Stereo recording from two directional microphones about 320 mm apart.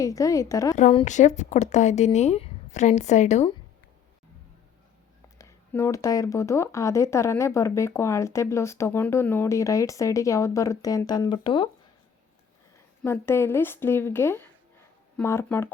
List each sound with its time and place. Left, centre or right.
0.0 s speech: centre
0.8 s speech: centre
5.4 s speech: centre
13.0 s speech: centre